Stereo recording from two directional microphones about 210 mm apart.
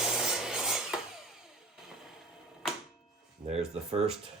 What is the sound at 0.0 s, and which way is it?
Rub, centre (ahead or behind).